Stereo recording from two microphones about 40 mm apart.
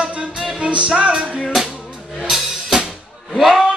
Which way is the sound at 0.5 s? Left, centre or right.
Right.